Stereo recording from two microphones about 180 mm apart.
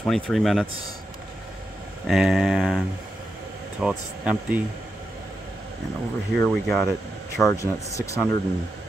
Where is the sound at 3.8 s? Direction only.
5° right (ahead or behind).